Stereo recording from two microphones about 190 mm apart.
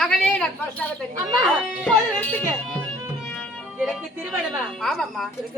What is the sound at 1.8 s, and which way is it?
Speech, 5° left (ahead or behind).